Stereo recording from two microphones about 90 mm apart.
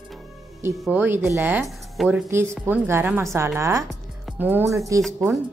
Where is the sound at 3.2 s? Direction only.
35° right (ahead or behind).